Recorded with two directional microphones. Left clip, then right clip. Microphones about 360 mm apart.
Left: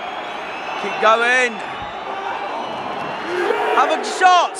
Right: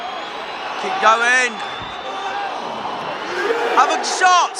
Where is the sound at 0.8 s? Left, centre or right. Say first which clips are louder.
Right 1 dB; centre.